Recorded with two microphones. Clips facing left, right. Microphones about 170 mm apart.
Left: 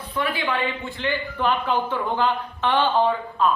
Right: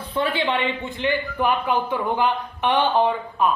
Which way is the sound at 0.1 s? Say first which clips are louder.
Right 3 dB; 25° right (ahead or behind).